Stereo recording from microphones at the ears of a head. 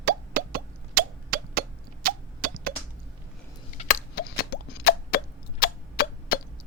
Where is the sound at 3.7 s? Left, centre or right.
Left.